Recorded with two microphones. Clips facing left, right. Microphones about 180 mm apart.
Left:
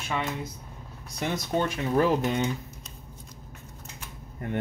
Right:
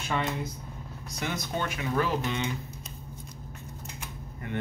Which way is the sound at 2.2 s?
45° left (ahead or behind).